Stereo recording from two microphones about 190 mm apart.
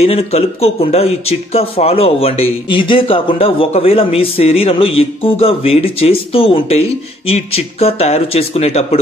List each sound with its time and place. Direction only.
0.0 s speech: 30° left (ahead or behind)